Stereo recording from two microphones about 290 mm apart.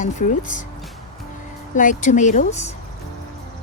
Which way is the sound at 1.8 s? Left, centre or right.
Left.